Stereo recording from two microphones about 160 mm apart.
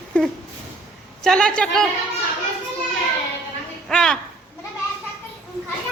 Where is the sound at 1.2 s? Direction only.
5° left (ahead or behind).